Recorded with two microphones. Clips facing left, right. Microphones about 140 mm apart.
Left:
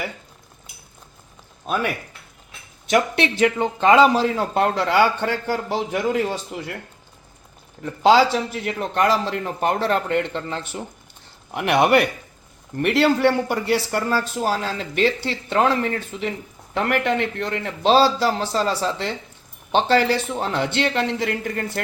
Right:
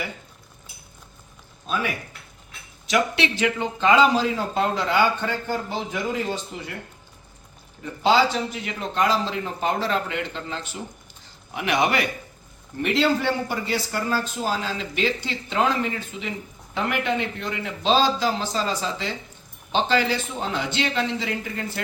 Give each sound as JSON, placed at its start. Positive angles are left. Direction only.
{"t": 1.7, "sound": "a man's voice", "side_deg": 55}
{"t": 2.8, "sound": "a man's voice", "side_deg": 50}
{"t": 8.0, "sound": "a man's voice", "side_deg": 90}
{"t": 8.6, "sound": "a man's voice", "side_deg": 60}
{"t": 20.1, "sound": "a man's voice", "side_deg": 65}